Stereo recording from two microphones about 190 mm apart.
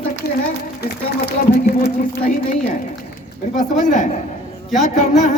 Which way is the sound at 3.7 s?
40° left (ahead or behind).